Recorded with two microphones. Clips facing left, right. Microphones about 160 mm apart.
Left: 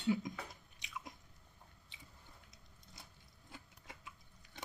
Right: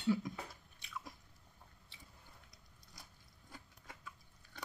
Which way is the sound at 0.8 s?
15° left (ahead or behind).